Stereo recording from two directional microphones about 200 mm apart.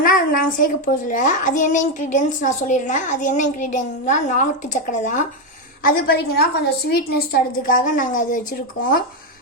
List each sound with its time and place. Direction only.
0.0 s a child's voice: 45° left (ahead or behind)
5.8 s a woman's voice: 50° left (ahead or behind)